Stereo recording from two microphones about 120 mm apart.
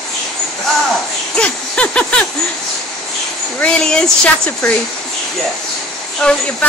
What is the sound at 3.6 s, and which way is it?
Speech, 5° left (ahead or behind).